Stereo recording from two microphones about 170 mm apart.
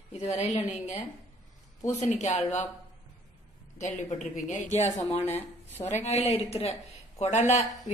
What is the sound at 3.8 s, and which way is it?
A woman's voice, 45° left (ahead or behind).